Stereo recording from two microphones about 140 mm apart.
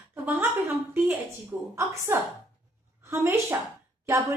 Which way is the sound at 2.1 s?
15° right (ahead or behind).